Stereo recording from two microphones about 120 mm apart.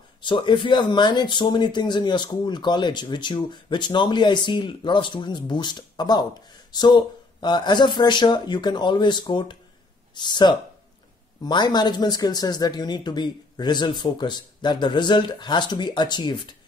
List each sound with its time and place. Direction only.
0.2 s speech: 40° left (ahead or behind)